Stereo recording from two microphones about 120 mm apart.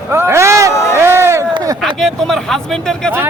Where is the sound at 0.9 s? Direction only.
20° right (ahead or behind).